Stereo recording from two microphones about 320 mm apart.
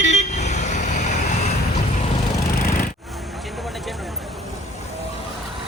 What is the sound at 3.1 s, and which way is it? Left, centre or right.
Vehicle, centre.